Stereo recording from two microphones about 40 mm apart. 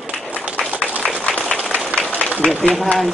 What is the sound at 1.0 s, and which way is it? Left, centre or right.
Applause, left.